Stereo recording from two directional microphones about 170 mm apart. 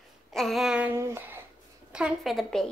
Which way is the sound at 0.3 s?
Centre (ahead or behind).